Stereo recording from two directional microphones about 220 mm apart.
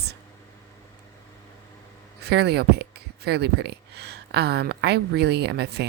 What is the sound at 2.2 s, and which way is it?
Speech, 50° right (ahead or behind).